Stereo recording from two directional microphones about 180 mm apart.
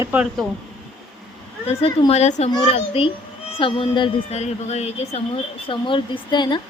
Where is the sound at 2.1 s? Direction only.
40° left (ahead or behind).